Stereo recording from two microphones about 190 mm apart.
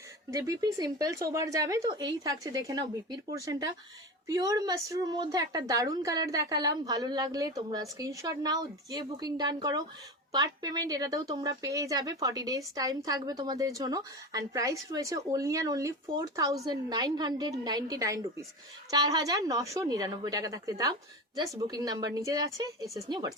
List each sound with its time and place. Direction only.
0.3 s a woman's voice: 15° right (ahead or behind)